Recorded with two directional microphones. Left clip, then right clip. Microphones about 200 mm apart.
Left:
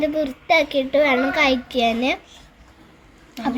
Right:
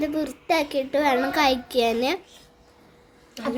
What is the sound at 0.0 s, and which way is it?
A child's voice, 20° right (ahead or behind).